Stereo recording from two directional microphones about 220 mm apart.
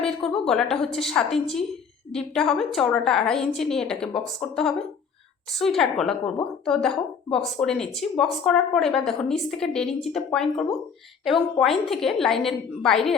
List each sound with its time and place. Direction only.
0.0 s speech: centre (ahead or behind)